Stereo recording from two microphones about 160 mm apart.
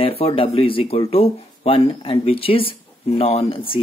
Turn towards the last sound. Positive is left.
turn(degrees=30)  # may be behind; listen again after turning